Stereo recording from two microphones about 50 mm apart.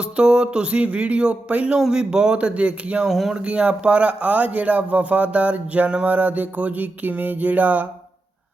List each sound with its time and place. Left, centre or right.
0.0 s a sound: centre
3.1 s speech: centre
3.3 s speech: right